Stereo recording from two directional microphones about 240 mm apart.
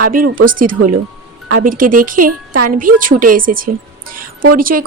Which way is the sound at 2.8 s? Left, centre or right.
Right.